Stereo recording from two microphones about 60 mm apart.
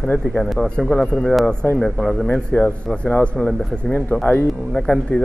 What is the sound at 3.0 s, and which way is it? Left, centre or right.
Speech, centre.